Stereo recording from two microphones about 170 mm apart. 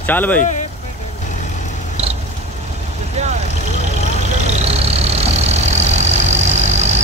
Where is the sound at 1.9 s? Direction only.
40° right (ahead or behind).